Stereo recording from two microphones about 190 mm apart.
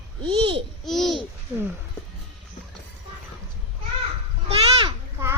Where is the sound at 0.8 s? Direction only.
Centre (ahead or behind).